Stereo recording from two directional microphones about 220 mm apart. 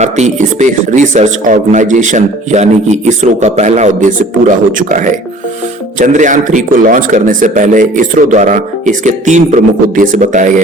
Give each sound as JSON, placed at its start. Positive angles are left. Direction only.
{"t": 0.0, "sound": "speech", "side_deg": -30}